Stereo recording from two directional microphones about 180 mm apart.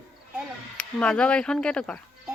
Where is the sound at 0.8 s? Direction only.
5° left (ahead or behind).